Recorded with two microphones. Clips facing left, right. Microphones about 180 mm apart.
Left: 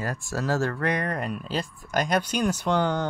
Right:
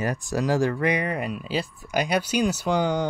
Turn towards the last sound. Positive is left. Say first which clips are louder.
# right 1 dB
turn(degrees=-10)  # may be behind; listen again after turning